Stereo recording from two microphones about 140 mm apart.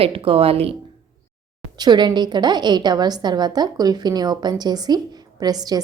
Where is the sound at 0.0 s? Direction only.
40° right (ahead or behind).